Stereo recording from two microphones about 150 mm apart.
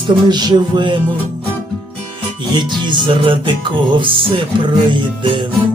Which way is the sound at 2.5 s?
30° right (ahead or behind).